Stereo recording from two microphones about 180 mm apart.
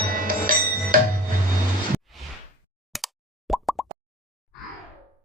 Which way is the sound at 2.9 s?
Centre (ahead or behind).